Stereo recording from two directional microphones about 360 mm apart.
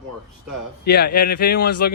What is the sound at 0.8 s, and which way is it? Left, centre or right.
Speech, left.